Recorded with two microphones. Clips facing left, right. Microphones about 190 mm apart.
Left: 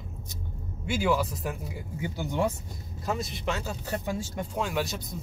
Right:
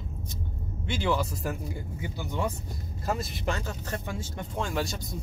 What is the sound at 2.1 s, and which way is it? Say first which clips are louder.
Speech: left 4 dB; 15° left (ahead or behind).